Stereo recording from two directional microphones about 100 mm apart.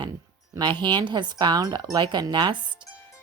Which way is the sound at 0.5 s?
50° right (ahead or behind).